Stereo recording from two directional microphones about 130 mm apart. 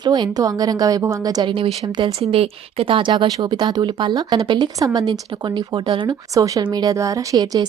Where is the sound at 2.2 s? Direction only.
50° right (ahead or behind).